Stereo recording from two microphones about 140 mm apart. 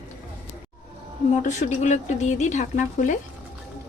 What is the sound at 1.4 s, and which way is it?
Speech, 60° left (ahead or behind).